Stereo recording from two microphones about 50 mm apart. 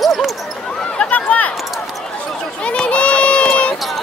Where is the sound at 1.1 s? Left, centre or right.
Left.